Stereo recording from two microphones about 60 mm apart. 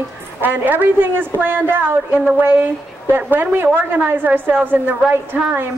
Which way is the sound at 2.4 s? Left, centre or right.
Right.